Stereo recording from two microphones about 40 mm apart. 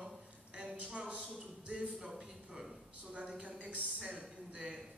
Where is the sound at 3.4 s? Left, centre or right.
Right.